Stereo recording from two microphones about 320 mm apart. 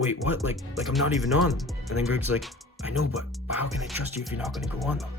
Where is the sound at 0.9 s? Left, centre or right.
Centre.